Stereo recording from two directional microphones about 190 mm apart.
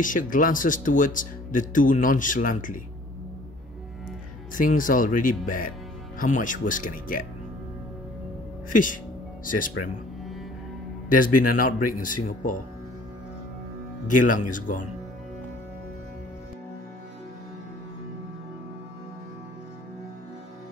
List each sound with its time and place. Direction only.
0.0 s speech: 45° left (ahead or behind)
4.6 s speech: 45° left (ahead or behind)
9.4 s speech: 45° left (ahead or behind)
11.1 s speech: 45° left (ahead or behind)
14.0 s speech: 45° left (ahead or behind)